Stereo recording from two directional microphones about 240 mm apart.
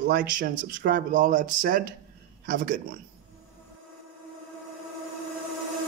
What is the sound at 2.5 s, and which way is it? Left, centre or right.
Speech, right.